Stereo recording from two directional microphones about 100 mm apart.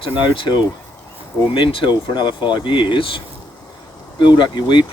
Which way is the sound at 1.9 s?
50° left (ahead or behind).